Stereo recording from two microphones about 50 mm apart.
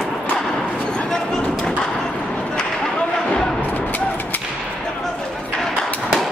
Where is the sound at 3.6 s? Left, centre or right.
Left.